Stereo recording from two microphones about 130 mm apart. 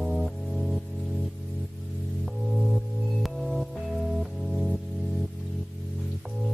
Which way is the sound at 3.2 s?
Centre (ahead or behind).